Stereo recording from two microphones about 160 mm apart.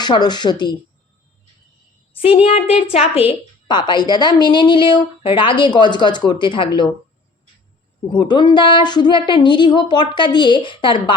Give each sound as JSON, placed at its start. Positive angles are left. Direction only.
{"t": 0.0, "sound": "a woman's voice", "side_deg": 25}
{"t": 2.1, "sound": "a woman's voice", "side_deg": 35}
{"t": 8.1, "sound": "a woman's voice", "side_deg": 30}